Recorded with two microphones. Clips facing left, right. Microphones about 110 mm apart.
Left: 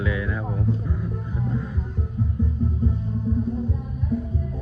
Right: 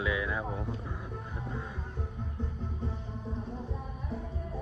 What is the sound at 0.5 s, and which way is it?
Music, 20° right (ahead or behind).